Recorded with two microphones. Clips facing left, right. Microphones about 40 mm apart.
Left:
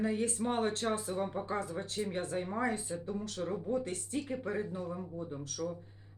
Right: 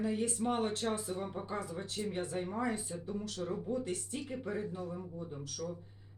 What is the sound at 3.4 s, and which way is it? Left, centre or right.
Speech, left.